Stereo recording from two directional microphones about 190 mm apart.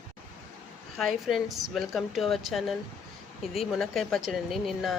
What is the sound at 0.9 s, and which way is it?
Speech, centre (ahead or behind).